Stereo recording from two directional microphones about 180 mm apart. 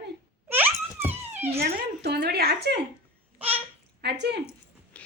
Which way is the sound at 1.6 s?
65° right (ahead or behind).